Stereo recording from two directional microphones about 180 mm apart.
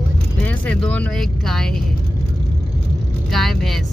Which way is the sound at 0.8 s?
5° left (ahead or behind).